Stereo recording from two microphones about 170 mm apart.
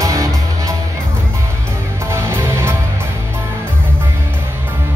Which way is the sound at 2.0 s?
15° right (ahead or behind).